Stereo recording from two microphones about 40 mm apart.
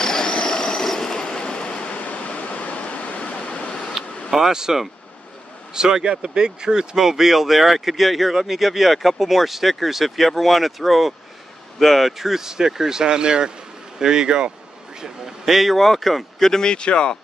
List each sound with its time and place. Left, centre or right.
0.0 s train: centre
1.4 s train: left
2.0 s waterfall: left
3.3 s a sound: left
4.5 s speech: centre
7.0 s speech: centre
15.0 s speech: centre
16.4 s speech: centre